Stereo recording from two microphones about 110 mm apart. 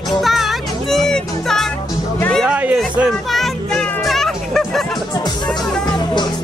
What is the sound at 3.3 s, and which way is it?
Music, 5° left (ahead or behind).